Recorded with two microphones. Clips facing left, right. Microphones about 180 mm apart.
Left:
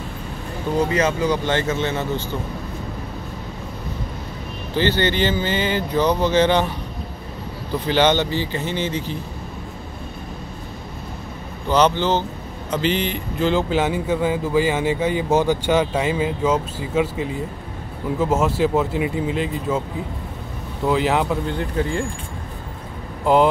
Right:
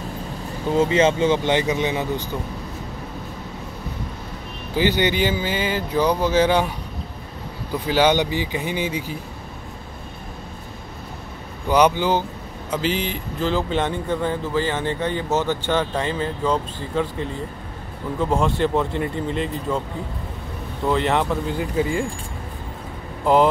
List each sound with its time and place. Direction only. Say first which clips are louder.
0.9 s speech: right 2 dB; 25° right (ahead or behind)
4.7 s speech: even; 15° right (ahead or behind)
7.8 s speech: even; 10° right (ahead or behind)
11.7 s a man's voice: even; 10° right (ahead or behind)
20.8 s speech: left 1 dB; centre (ahead or behind)
23.2 s speech: left 1 dB; centre (ahead or behind)